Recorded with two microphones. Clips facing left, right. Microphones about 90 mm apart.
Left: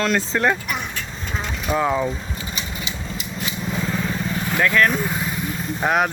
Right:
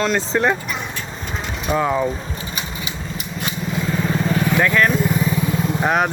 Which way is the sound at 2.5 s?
30° left (ahead or behind).